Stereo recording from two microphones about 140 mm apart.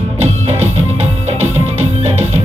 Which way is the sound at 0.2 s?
50° right (ahead or behind).